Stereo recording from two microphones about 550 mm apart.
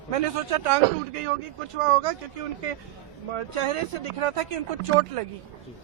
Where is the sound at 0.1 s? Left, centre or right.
Right.